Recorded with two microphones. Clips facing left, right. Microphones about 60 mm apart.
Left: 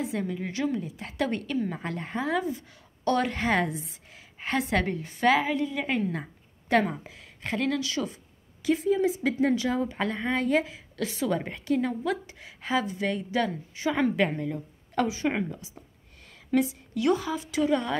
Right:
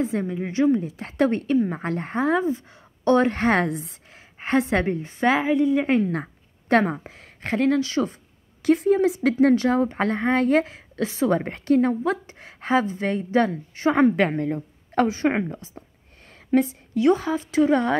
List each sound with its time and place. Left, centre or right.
0.0 s a woman's voice: right
4.1 s a woman's voice: right
5.9 s a woman's voice: right
6.2 s a sound: right
7.0 s a woman's voice: right
8.6 s a woman's voice: right
11.0 s a woman's voice: right